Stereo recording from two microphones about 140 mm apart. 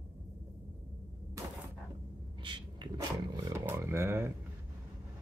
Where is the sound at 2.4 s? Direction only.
35° right (ahead or behind).